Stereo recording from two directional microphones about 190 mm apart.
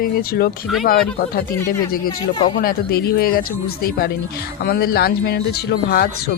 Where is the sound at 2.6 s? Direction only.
50° left (ahead or behind).